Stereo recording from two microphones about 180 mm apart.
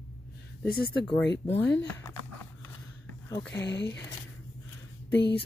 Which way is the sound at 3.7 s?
70° left (ahead or behind).